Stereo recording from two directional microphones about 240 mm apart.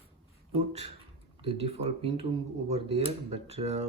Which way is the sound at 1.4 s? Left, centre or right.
Right.